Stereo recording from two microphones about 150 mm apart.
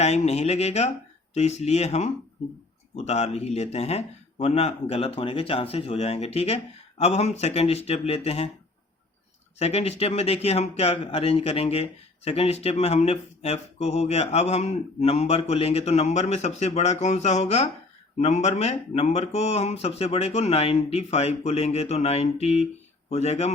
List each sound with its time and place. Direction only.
0.0 s speech: 45° left (ahead or behind)
9.6 s speech: 45° left (ahead or behind)